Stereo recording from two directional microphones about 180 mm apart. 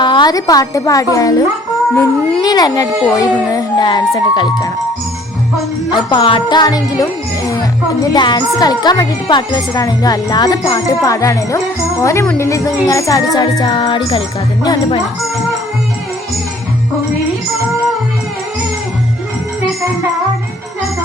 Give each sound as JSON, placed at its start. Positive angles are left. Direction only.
{"t": 0.0, "sound": "speech", "side_deg": 25}
{"t": 2.4, "sound": "a woman's voice", "side_deg": 20}
{"t": 6.1, "sound": "a woman's voice", "side_deg": 25}